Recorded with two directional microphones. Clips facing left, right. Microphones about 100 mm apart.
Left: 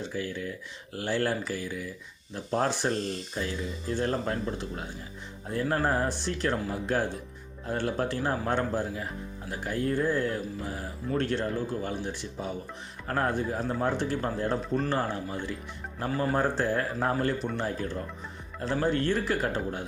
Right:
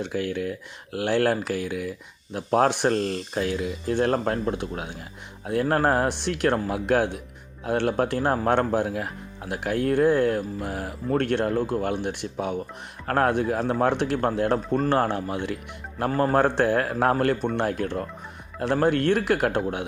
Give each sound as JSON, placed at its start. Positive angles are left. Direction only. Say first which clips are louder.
{"t": 0.0, "sound": "speech", "louder": "right 6 dB", "side_deg": -65}
{"t": 16.0, "sound": "speech", "louder": "right 6 dB", "side_deg": -55}